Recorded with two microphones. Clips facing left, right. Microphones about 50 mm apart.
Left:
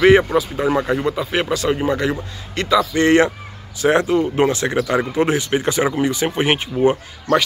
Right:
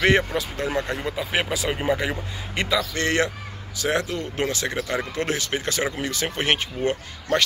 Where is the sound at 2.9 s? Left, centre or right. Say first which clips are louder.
Left 9 dB; left.